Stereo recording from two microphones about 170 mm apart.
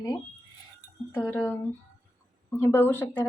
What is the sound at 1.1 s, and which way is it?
Speech, 10° left (ahead or behind).